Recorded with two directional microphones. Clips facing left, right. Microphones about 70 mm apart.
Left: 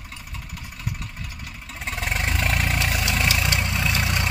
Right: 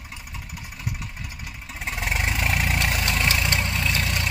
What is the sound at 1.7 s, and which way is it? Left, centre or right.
Vehicle, centre.